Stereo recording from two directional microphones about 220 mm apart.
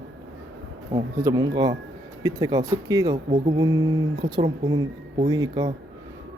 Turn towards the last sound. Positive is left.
turn(degrees=-15)  # may be behind; listen again after turning